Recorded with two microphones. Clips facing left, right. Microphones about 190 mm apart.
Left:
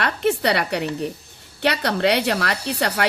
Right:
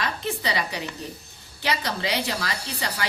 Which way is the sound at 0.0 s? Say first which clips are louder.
Left 8 dB; 65° left (ahead or behind).